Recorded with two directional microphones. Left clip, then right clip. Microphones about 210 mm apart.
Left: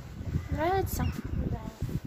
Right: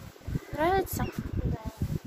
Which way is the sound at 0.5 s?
10° right (ahead or behind).